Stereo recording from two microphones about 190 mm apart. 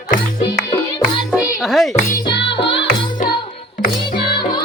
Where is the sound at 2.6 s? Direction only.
65° left (ahead or behind).